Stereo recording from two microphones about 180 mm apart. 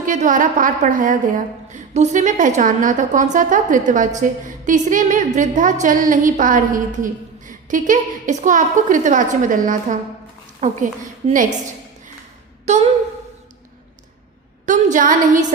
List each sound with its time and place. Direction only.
0.0 s a woman's voice: 45° right (ahead or behind)
12.6 s a sound: 40° right (ahead or behind)
14.7 s a woman's voice: 45° right (ahead or behind)